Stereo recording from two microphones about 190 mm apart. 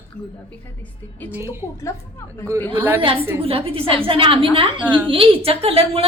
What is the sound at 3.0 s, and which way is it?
A woman's voice, 30° right (ahead or behind).